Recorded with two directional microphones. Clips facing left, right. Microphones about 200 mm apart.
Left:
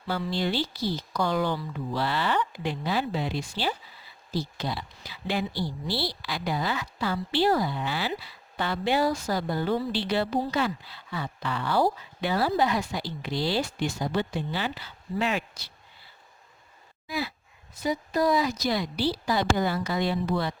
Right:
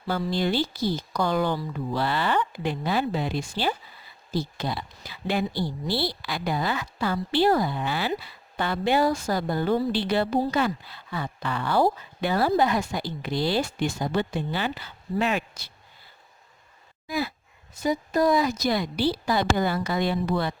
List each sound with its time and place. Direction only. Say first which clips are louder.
0.1 s speech: right 3 dB; 45° right (ahead or behind)
17.1 s a woman's voice: right 3 dB; 45° right (ahead or behind)